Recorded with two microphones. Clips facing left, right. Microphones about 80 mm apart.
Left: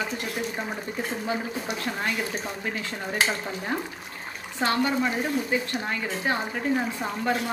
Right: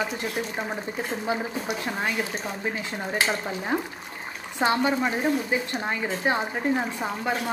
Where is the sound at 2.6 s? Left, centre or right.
Centre.